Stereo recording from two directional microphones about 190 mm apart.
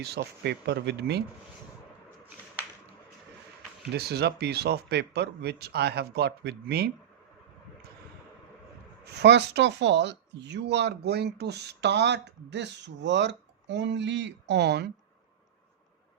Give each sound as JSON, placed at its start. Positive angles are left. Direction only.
{"t": 0.0, "sound": "speech", "side_deg": -60}
{"t": 3.9, "sound": "speech", "side_deg": -60}
{"t": 9.0, "sound": "speech", "side_deg": -60}